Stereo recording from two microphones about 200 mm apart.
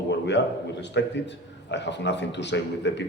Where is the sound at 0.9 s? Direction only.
60° left (ahead or behind).